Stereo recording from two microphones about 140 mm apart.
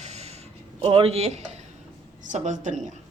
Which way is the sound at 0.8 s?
40° right (ahead or behind).